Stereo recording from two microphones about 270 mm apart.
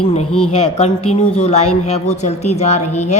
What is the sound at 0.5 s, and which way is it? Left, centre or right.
A woman's voice, left.